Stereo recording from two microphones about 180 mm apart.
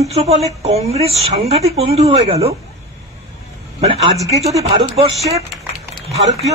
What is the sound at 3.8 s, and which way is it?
A woman's voice, 35° right (ahead or behind).